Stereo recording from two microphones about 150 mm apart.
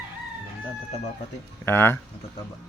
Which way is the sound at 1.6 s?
15° left (ahead or behind).